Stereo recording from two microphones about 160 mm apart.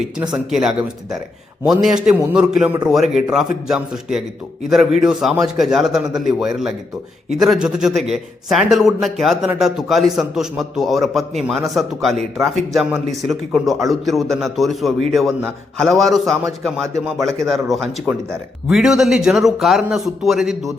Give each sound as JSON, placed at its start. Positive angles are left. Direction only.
{"t": 0.3, "sound": "a man's voice", "side_deg": -5}